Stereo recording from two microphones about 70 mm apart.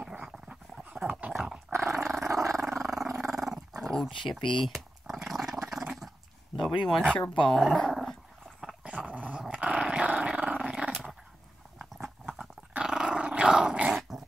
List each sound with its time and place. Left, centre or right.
0.2 s dog: centre
1.7 s dog: right
2.3 s dog: right
2.8 s dog: centre
4.0 s purr: centre
6.5 s speech: centre
7.1 s speech: centre
8.5 s dog: centre
10.9 s dog: centre
11.8 s dog: centre